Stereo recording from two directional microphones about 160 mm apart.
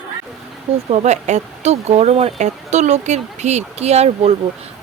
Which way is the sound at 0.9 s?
45° right (ahead or behind).